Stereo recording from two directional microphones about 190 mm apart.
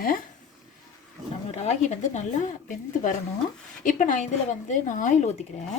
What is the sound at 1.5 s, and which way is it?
Speech, 35° left (ahead or behind).